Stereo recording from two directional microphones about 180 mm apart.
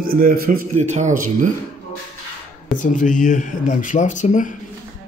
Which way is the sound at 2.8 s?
45° left (ahead or behind).